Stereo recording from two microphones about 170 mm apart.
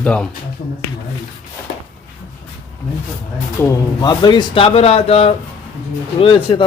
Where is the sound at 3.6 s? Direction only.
20° left (ahead or behind).